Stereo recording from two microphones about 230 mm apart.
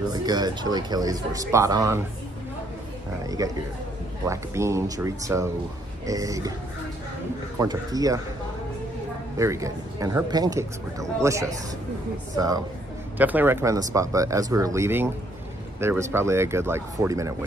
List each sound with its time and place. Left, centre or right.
0.1 s speech: centre
3.3 s speech: centre
7.5 s speech: centre
9.4 s speech: centre